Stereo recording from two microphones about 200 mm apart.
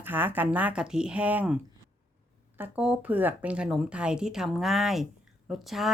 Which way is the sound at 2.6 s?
5° right (ahead or behind).